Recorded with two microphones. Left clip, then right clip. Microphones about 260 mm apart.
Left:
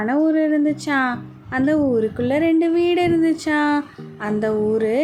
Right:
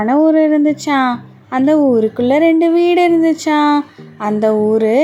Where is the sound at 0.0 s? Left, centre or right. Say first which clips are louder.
Right 7 dB; centre.